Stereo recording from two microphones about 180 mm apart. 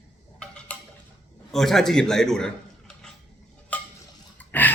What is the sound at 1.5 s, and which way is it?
A man's voice, centre (ahead or behind).